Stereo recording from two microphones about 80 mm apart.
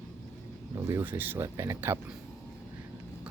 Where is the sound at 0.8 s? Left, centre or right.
Right.